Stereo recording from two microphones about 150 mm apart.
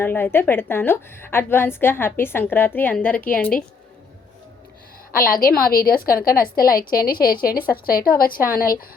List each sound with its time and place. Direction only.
0.0 s a woman's voice: 15° left (ahead or behind)
5.1 s a woman's voice: 75° left (ahead or behind)
8.4 s a woman's voice: 70° left (ahead or behind)